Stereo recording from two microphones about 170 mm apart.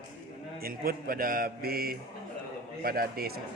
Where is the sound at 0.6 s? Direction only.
60° right (ahead or behind).